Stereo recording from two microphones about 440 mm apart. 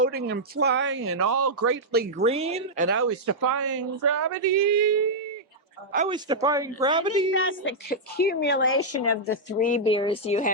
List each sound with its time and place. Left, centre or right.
0.0 s speech: right
5.9 s speech: centre
7.3 s a woman's voice: left